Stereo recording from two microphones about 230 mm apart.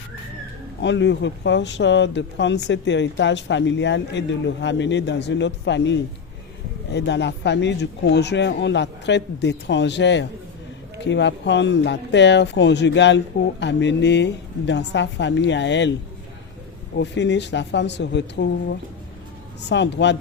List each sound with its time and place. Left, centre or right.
0.8 s speech: left
17.0 s speech: left